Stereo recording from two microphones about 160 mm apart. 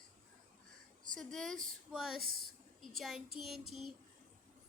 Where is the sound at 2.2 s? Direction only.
65° right (ahead or behind).